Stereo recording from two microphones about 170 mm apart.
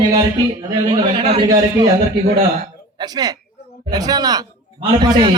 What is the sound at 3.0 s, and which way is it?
A man's voice, 25° right (ahead or behind).